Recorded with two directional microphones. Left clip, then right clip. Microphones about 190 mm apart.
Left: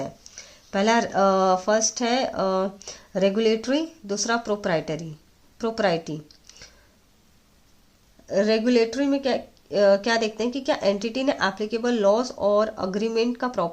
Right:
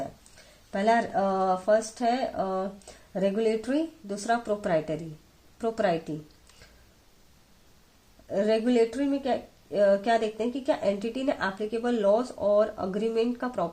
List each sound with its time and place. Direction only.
0.7 s speech: 30° left (ahead or behind)
8.3 s speech: 20° left (ahead or behind)